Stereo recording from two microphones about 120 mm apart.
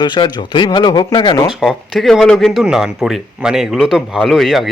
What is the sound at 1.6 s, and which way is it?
Speech, centre (ahead or behind).